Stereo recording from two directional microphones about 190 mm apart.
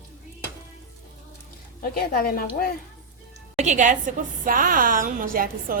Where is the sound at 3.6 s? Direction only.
40° right (ahead or behind).